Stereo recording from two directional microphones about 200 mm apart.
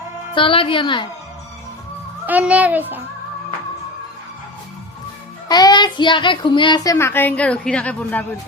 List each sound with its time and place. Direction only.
0.3 s a child's voice: 25° left (ahead or behind)
2.2 s a child's voice: 5° right (ahead or behind)
5.5 s a child's voice: 20° left (ahead or behind)